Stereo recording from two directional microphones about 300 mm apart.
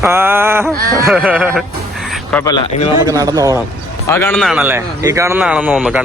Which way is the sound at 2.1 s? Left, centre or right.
Centre.